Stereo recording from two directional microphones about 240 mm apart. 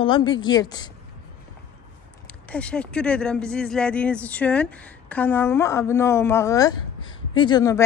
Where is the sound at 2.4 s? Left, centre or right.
Centre.